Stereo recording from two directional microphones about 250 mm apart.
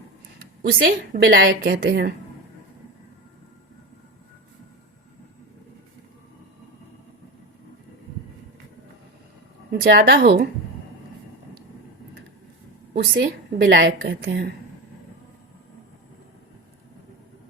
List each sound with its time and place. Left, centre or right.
0.6 s a woman's voice: right
9.8 s a woman's voice: right
12.9 s a woman's voice: right